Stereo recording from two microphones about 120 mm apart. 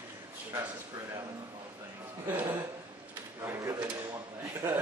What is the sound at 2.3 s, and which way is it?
A man's voice, 15° right (ahead or behind).